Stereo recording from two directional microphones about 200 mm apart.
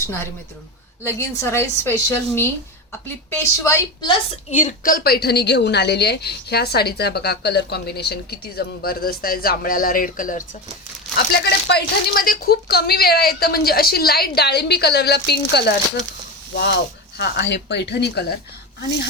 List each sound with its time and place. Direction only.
1.0 s a woman's voice: 10° left (ahead or behind)
4.5 s a woman's voice: 40° left (ahead or behind)
11.3 s a woman's voice: 55° left (ahead or behind)